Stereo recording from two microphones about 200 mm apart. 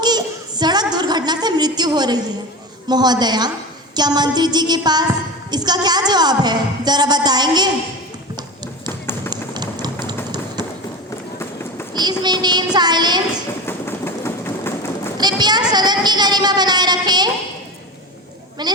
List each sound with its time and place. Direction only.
0.0 s a woman's voice: 20° right (ahead or behind)
8.9 s run: 10° left (ahead or behind)
9.3 s a sound: 20° right (ahead or behind)
12.2 s a woman's voice: 20° right (ahead or behind)
13.7 s train: 10° left (ahead or behind)
15.2 s a child's voice: 20° right (ahead or behind)
18.6 s a woman's voice: 20° right (ahead or behind)